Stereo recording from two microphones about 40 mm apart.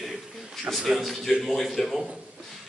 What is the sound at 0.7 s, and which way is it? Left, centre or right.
A man's voice, centre.